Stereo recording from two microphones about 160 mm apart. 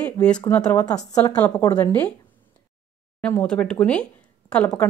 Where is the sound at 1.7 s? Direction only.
10° left (ahead or behind).